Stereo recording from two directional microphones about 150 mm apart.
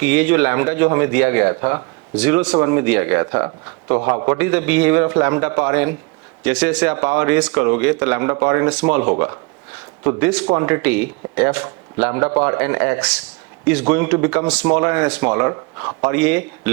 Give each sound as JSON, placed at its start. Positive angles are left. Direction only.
{"t": 0.0, "sound": "a man's voice", "side_deg": -10}